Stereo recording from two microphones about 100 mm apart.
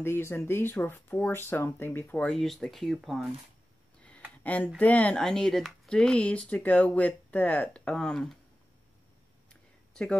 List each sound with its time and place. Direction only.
0.0 s speech: 25° left (ahead or behind)
2.2 s speech: 5° left (ahead or behind)
4.4 s speech: 15° left (ahead or behind)
9.5 s a sound: 10° left (ahead or behind)